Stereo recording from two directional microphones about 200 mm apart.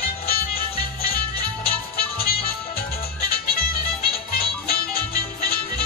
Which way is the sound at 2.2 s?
50° left (ahead or behind).